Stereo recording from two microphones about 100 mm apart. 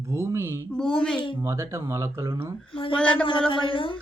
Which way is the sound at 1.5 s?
30° right (ahead or behind).